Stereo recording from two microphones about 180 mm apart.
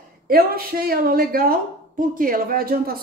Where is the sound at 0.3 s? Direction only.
55° right (ahead or behind).